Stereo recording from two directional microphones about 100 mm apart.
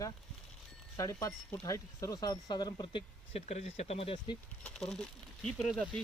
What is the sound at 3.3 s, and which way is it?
Speech, 90° left.